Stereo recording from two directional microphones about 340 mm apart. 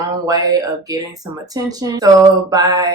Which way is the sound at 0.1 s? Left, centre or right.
Centre.